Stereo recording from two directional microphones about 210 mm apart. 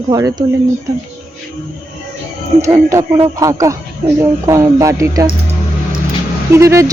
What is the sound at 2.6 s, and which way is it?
Speech, 15° right (ahead or behind).